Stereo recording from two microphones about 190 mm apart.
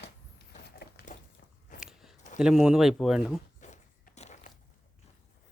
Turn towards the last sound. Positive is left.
turn(degrees=35)  # may be behind; listen again after turning